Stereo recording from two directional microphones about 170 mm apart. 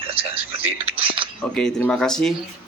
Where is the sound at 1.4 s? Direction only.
5° left (ahead or behind).